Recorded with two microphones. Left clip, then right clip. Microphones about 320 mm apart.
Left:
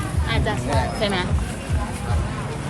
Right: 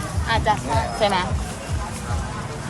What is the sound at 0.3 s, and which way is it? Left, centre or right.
Music, right.